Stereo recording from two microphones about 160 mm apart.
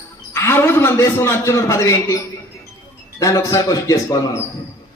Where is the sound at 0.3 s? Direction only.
15° left (ahead or behind).